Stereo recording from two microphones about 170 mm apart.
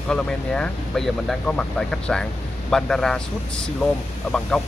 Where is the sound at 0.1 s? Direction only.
5° left (ahead or behind).